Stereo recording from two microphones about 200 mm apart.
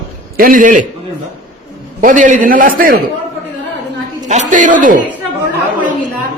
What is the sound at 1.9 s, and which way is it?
A man's voice, 40° right (ahead or behind).